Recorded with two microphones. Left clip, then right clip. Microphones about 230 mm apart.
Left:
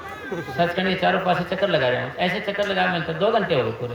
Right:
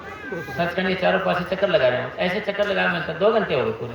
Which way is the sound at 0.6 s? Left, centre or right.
Left.